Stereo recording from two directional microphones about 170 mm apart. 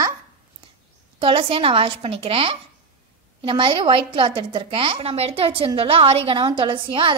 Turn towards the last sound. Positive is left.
turn(degrees=-30)  # may be behind; listen again after turning